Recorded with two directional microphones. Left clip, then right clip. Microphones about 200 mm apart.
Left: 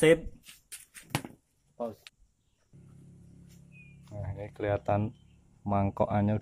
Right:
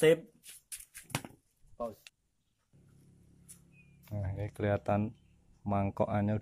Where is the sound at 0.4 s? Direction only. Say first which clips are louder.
Left 2 dB; 25° right (ahead or behind).